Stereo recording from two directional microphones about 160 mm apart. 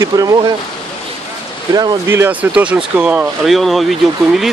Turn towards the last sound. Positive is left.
turn(degrees=0)  # may be behind; listen again after turning